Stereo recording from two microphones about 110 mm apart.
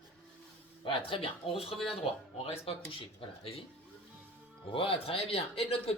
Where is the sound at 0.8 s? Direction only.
55° left (ahead or behind).